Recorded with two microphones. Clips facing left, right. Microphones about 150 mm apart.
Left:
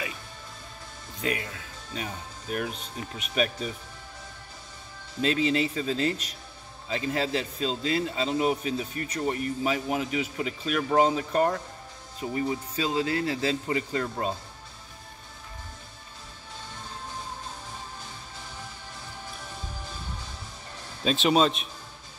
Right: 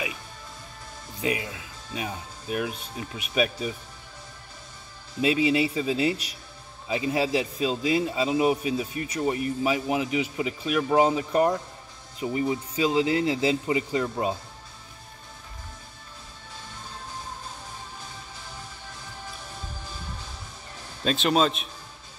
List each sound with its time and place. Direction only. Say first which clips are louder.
1.2 s a man's voice: right 2 dB; 10° right (ahead or behind)
5.2 s a man's voice: right 3 dB; 10° right (ahead or behind)
21.0 s a man's voice: even; centre (ahead or behind)